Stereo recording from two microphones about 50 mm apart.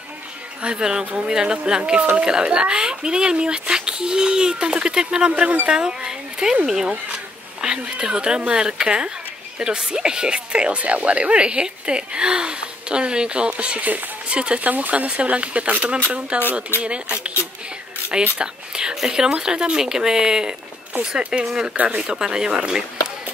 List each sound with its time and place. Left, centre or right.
0.6 s speech: centre
5.3 s a woman's voice: right
16.7 s speech: left
18.4 s speech: centre
21.7 s speech: right
22.1 s speech: centre